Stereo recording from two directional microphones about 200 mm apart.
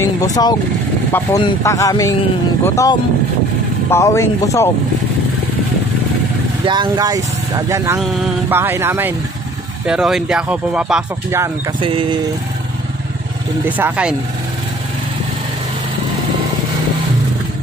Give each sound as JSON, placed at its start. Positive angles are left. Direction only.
{"t": 0.0, "sound": "speech", "side_deg": 20}
{"t": 6.6, "sound": "speech", "side_deg": -20}
{"t": 8.0, "sound": "speech", "side_deg": 0}
{"t": 8.5, "sound": "speech", "side_deg": -10}
{"t": 11.8, "sound": "speech", "side_deg": -25}
{"t": 13.7, "sound": "speech", "side_deg": -10}